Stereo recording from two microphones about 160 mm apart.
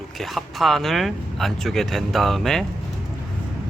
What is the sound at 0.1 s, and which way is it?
Speech, centre (ahead or behind).